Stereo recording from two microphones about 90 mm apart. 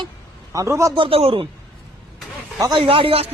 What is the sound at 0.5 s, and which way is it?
Speech, 35° right (ahead or behind).